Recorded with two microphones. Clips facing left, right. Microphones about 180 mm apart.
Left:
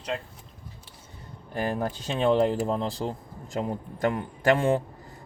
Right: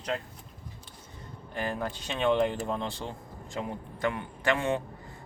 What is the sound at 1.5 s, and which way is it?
Speech, 40° left (ahead or behind).